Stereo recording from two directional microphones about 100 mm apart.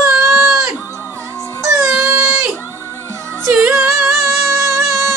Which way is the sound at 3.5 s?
15° right (ahead or behind).